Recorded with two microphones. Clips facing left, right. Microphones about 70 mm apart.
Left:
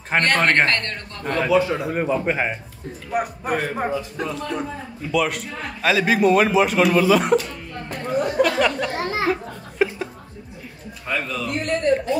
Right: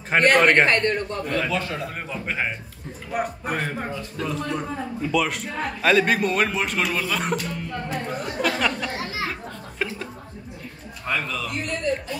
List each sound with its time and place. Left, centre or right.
0.1 s a man's voice: centre
1.4 s a man's voice: centre
3.1 s a man's voice: centre
7.9 s chatter: centre
8.9 s children playing: left
9.3 s a sound: centre
11.1 s a man's voice: centre